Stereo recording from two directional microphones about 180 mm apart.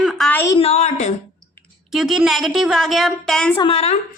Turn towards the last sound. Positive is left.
turn(degrees=35)  # may be behind; listen again after turning